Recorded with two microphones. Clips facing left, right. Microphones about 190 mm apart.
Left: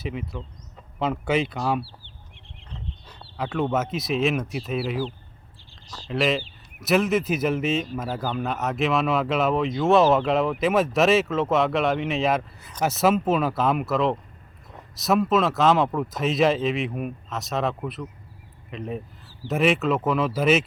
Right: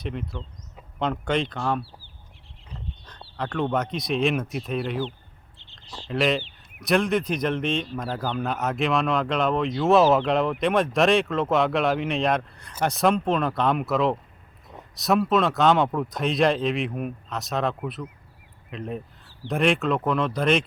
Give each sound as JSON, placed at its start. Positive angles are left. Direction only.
{"t": 0.0, "sound": "speech", "side_deg": 5}
{"t": 3.3, "sound": "speech", "side_deg": 5}
{"t": 5.5, "sound": "a sound", "side_deg": -20}
{"t": 6.1, "sound": "speech", "side_deg": 0}